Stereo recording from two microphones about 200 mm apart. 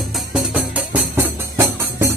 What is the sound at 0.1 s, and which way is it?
Music, 5° right (ahead or behind).